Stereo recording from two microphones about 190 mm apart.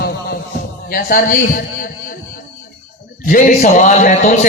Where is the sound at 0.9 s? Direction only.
50° left (ahead or behind).